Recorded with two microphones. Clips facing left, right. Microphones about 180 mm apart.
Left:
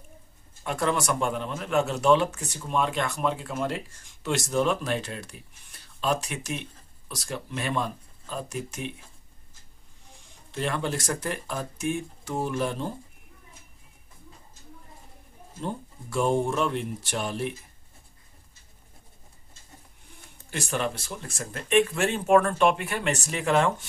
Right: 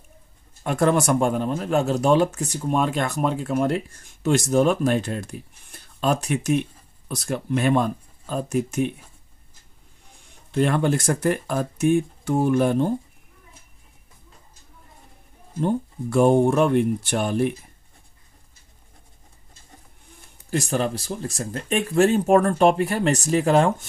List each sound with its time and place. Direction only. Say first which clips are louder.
0.7 s speech: right 7 dB; 50° right (ahead or behind)
10.5 s speech: right 8 dB; 55° right (ahead or behind)
15.6 s speech: right 10 dB; 55° right (ahead or behind)
20.4 s speech: right 6 dB; 40° right (ahead or behind)